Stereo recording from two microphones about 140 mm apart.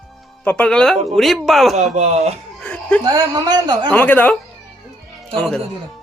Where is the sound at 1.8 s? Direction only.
55° right (ahead or behind).